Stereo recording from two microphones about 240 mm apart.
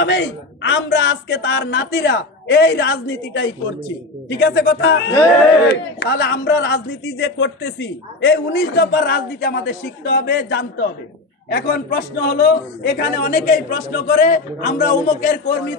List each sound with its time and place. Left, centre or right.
0.0 s a man's voice: left